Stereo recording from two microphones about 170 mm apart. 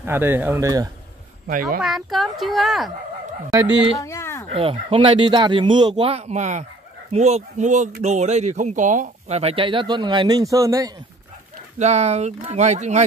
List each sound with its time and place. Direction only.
0.0 s speech: 15° right (ahead or behind)
1.5 s speech: 55° right (ahead or behind)
1.8 s a child's voice: centre (ahead or behind)
4.0 s a sound: 15° left (ahead or behind)
4.5 s speech: 35° right (ahead or behind)
11.8 s speech: 40° right (ahead or behind)